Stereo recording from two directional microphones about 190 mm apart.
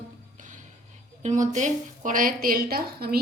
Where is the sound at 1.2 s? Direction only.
40° right (ahead or behind).